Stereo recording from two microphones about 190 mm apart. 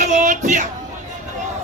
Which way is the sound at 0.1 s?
40° right (ahead or behind).